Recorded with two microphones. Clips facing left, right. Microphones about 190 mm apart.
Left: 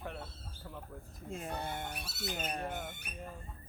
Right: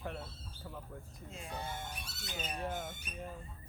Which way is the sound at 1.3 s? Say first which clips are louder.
Left 4 dB; 50° left (ahead or behind).